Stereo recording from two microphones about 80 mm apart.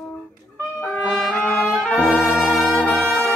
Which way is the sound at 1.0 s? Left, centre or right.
Centre.